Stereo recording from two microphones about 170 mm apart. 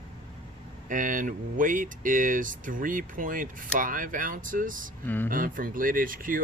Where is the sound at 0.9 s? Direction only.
50° right (ahead or behind).